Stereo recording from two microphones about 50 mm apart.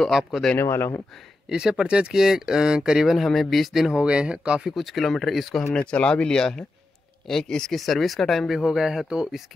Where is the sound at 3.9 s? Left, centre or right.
Right.